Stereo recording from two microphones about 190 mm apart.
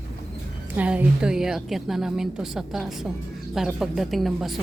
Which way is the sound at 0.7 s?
5° right (ahead or behind).